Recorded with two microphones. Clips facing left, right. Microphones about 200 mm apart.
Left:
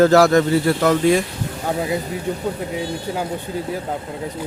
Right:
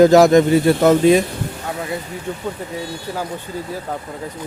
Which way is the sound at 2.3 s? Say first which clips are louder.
Left 2 dB; 15° left (ahead or behind).